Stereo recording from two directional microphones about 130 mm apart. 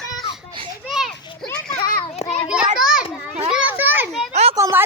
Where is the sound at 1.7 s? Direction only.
90° left.